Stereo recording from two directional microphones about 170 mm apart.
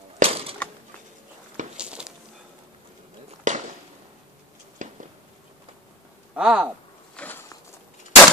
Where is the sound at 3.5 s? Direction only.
45° right (ahead or behind).